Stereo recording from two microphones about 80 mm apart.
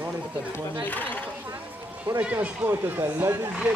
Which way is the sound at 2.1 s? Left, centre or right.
Right.